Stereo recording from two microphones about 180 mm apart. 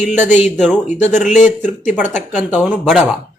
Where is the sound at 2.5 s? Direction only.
10° right (ahead or behind).